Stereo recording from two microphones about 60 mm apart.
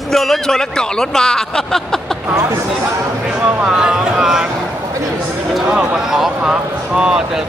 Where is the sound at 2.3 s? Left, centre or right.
Right.